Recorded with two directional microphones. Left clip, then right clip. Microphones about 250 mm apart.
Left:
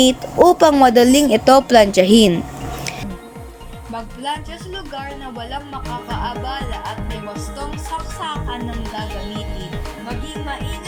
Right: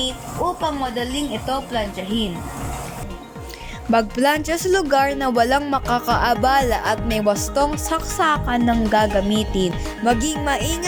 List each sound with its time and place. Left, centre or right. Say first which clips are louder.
0.0 s a woman's voice: left 11 dB; left
3.9 s speech: right 8 dB; right